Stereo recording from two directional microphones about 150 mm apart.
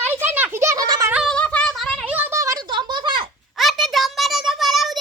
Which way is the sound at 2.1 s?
15° right (ahead or behind).